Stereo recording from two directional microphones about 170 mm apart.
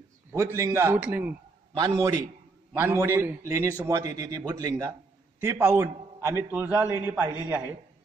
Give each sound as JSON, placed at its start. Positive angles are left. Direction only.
{"t": 0.3, "sound": "a man's voice", "side_deg": -15}
{"t": 2.7, "sound": "a man's voice", "side_deg": -15}